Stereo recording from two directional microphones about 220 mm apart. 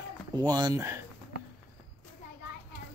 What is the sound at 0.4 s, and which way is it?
Speech, 15° right (ahead or behind).